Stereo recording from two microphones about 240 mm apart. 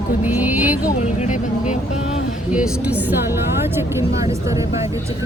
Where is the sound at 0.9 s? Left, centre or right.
Left.